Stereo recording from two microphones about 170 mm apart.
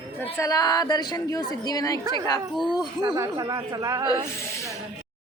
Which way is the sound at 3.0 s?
15° right (ahead or behind).